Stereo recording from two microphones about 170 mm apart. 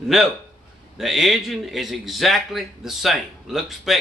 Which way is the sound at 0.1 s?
Centre (ahead or behind).